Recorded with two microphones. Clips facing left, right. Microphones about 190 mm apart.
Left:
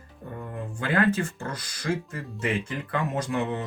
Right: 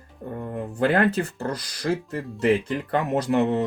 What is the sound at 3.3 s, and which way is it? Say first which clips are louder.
Speech: right 8 dB; 40° right (ahead or behind).